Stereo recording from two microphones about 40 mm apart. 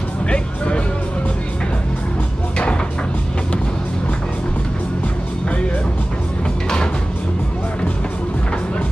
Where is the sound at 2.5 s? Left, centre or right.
Left.